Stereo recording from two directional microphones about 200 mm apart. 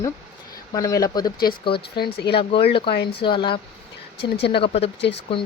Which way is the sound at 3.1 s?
25° left (ahead or behind).